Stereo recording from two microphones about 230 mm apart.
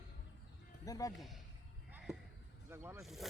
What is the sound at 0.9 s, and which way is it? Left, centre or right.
Speech, centre.